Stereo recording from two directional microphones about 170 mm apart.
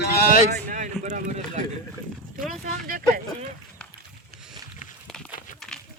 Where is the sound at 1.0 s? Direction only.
45° right (ahead or behind).